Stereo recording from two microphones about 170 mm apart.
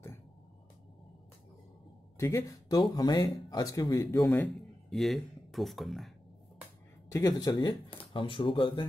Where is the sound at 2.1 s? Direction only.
15° left (ahead or behind).